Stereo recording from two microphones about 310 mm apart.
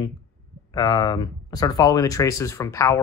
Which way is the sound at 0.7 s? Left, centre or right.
Centre.